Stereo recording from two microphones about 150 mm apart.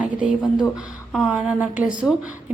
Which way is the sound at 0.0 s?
10° right (ahead or behind).